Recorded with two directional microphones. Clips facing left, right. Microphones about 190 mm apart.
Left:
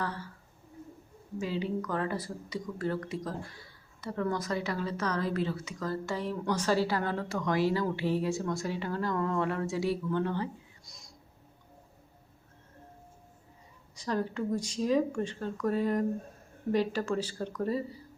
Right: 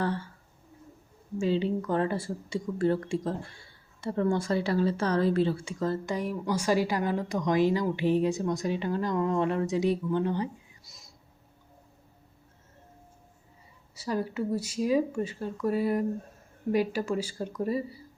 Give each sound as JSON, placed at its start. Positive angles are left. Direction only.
{"t": 0.0, "sound": "speech", "side_deg": -30}
{"t": 1.4, "sound": "speech", "side_deg": -25}
{"t": 6.1, "sound": "a woman's voice", "side_deg": -10}
{"t": 10.8, "sound": "a sound", "side_deg": 0}
{"t": 13.9, "sound": "a woman's voice", "side_deg": -10}